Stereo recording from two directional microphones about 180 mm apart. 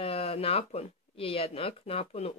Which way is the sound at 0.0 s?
35° left (ahead or behind).